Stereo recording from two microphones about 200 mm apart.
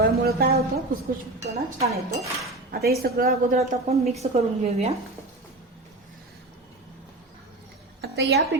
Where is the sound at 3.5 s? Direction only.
30° right (ahead or behind).